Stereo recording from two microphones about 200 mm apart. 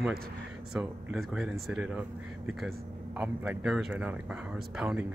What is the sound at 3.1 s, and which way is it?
Speech, 5° right (ahead or behind).